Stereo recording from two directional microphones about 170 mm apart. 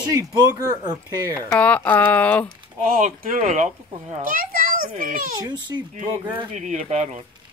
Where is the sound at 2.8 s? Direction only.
55° right (ahead or behind).